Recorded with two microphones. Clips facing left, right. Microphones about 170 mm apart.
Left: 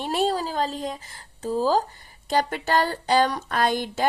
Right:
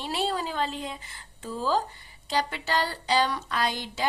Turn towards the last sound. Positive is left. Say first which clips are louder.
# left 6 dB
turn(degrees=50)  # may be behind; listen again after turning